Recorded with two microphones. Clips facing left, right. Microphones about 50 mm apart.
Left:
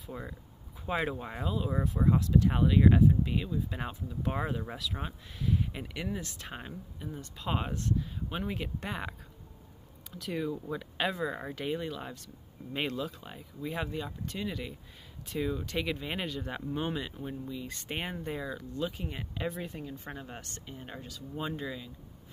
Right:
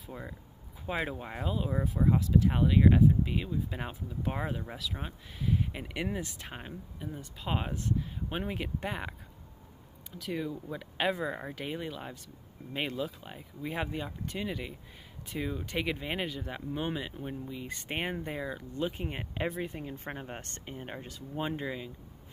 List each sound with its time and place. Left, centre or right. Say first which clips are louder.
0.0 s speech: left 1 dB; centre
1.7 s speech: even; centre
10.1 s speech: left 1 dB; centre; by 21.9 s right